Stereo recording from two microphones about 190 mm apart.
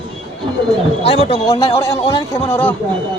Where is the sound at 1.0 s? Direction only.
30° left (ahead or behind).